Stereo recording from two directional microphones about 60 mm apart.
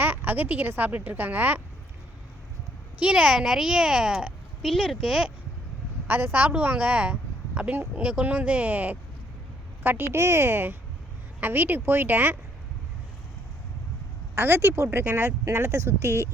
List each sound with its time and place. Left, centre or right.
0.0 s a sound: right
0.8 s a woman's voice: right
3.0 s speech: centre
4.6 s speech: centre
6.1 s a woman's voice: right
10.2 s a woman's voice: right
14.3 s a woman's voice: right